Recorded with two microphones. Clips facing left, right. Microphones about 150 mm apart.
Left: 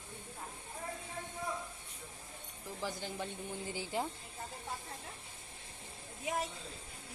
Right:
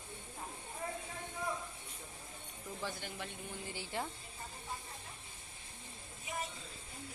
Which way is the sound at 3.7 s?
15° left (ahead or behind).